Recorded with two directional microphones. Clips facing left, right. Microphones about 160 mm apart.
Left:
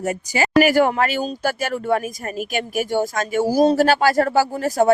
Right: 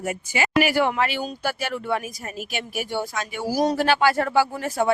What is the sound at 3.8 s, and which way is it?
A woman's voice, 40° left (ahead or behind).